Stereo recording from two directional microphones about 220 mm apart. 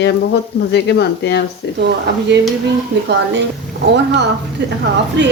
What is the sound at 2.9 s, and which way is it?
Speech, 55° right (ahead or behind).